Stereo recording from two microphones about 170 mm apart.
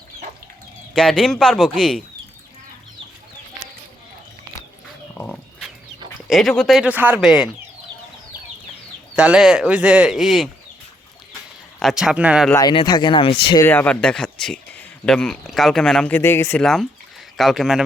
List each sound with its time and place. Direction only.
0.9 s speech: 5° left (ahead or behind)
5.1 s livestock: 10° left (ahead or behind)
6.2 s speech: centre (ahead or behind)
9.1 s speech: 5° right (ahead or behind)
11.8 s speech: centre (ahead or behind)
12.5 s speech: 25° left (ahead or behind)
13.6 s speech: 10° left (ahead or behind)
17.3 s speech: centre (ahead or behind)